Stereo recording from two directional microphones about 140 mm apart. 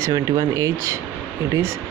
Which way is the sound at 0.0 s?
25° right (ahead or behind).